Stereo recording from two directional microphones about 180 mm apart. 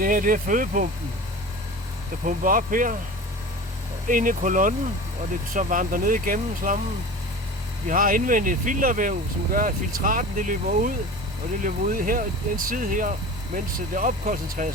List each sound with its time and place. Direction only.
0.0 s speech: 50° right (ahead or behind)
2.2 s speech: 50° right (ahead or behind)
4.1 s speech: 50° right (ahead or behind)
7.9 s speech: 50° right (ahead or behind)